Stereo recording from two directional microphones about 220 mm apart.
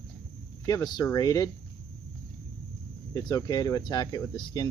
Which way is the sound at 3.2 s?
15° left (ahead or behind).